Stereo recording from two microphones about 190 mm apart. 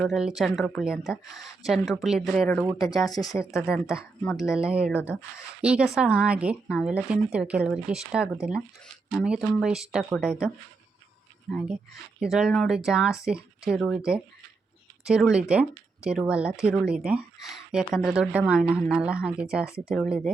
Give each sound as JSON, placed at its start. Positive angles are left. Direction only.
{"t": 0.0, "sound": "speech", "side_deg": 0}
{"t": 2.7, "sound": "speech", "side_deg": 20}
{"t": 3.5, "sound": "speech", "side_deg": 0}
{"t": 12.2, "sound": "speech", "side_deg": 0}